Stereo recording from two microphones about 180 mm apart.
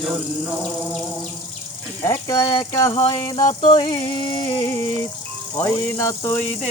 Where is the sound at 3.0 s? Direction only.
25° left (ahead or behind).